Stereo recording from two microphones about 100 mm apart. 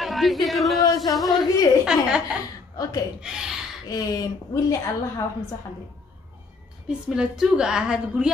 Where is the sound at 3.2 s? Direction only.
5° right (ahead or behind).